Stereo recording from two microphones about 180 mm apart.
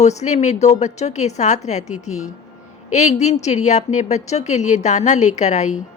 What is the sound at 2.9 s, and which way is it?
A woman's voice, 40° left (ahead or behind).